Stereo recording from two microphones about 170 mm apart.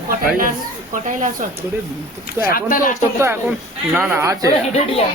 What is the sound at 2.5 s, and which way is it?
Speech, 55° left (ahead or behind).